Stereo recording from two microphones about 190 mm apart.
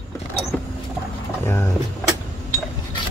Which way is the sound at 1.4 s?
15° left (ahead or behind).